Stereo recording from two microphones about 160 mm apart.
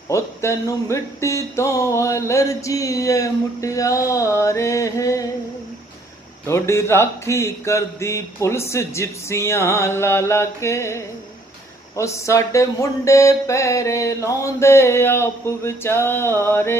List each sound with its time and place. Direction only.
0.1 s speech: 20° left (ahead or behind)
6.4 s mantra: 15° left (ahead or behind)